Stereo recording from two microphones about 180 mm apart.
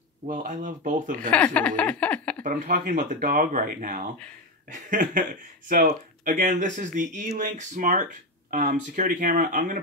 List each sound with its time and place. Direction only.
0.3 s speech: 45° right (ahead or behind)
1.3 s a sound: 5° left (ahead or behind)
2.4 s speech: 45° right (ahead or behind)